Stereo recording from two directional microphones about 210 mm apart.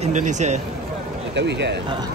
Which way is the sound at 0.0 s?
35° right (ahead or behind).